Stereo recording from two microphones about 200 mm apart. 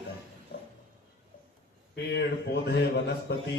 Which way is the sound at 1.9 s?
55° left (ahead or behind).